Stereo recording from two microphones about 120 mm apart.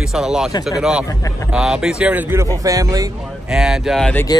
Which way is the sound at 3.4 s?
5° right (ahead or behind).